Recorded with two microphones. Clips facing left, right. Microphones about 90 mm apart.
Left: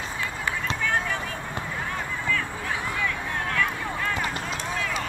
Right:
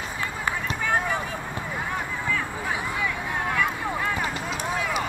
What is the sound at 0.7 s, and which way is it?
Run, 15° right (ahead or behind).